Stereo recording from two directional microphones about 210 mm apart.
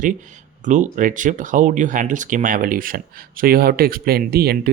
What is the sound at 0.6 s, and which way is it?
Speech, 35° right (ahead or behind).